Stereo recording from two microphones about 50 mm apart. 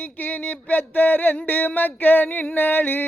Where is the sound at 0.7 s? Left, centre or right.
Left.